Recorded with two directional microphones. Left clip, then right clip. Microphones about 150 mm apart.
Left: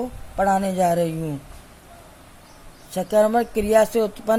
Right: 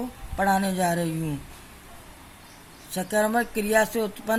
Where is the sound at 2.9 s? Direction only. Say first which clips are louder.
Left 6 dB; 40° left (ahead or behind).